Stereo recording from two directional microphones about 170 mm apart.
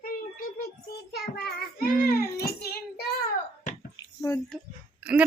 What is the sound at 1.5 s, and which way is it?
Child singing, 65° left (ahead or behind).